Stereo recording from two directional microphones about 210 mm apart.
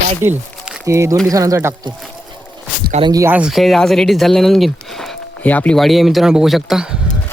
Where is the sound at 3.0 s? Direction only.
15° right (ahead or behind).